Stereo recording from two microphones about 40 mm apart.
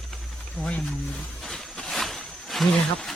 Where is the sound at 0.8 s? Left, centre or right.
Centre.